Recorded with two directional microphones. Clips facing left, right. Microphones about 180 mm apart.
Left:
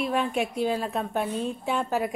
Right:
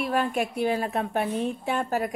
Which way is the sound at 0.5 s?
60° right (ahead or behind).